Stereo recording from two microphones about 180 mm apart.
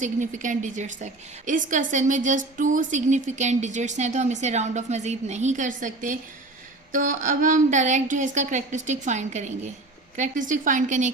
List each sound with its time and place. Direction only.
0.0 s a woman's voice: 45° right (ahead or behind)